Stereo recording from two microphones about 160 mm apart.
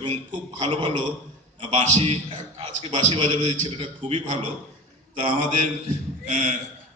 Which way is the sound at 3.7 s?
35° right (ahead or behind).